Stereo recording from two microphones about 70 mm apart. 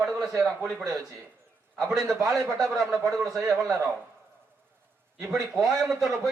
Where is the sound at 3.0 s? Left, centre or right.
Right.